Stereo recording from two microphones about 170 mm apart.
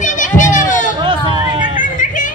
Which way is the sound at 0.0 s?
50° left (ahead or behind).